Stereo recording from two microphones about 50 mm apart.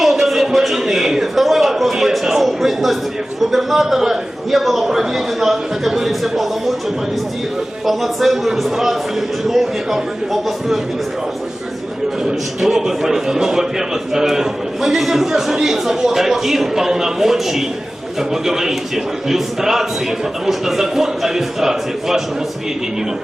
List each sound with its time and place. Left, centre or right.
0.0 s a sound: centre
3.4 s a man's voice: centre
7.9 s a man's voice: centre
12.2 s a man's voice: centre